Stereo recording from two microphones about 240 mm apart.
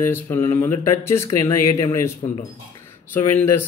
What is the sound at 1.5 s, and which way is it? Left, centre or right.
Speech, left.